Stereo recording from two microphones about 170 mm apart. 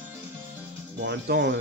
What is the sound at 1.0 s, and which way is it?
Speech, 85° right.